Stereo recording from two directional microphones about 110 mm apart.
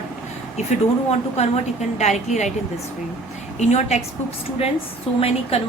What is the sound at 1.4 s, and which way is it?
A woman's voice, 90° left.